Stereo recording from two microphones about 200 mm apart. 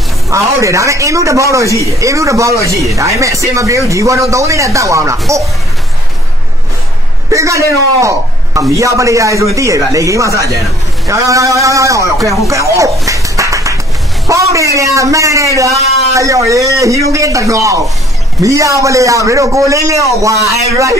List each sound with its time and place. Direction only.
0.3 s a man's voice: 15° right (ahead or behind)
7.2 s a man's voice: 15° right (ahead or behind)
13.0 s a sound: 15° right (ahead or behind)
14.2 s a man's voice: 15° right (ahead or behind)